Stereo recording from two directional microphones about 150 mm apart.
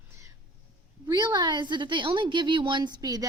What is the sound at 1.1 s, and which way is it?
A woman's voice, 30° right (ahead or behind).